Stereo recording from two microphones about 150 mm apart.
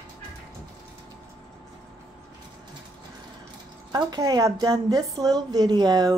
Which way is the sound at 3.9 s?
25° right (ahead or behind).